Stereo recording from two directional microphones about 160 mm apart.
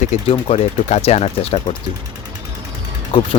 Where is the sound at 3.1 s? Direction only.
35° left (ahead or behind).